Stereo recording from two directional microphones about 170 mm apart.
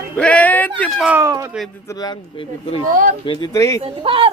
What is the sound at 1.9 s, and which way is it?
Speech, 25° left (ahead or behind).